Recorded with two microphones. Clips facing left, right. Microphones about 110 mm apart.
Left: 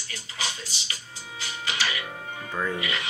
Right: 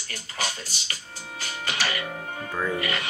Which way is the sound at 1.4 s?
50° right (ahead or behind).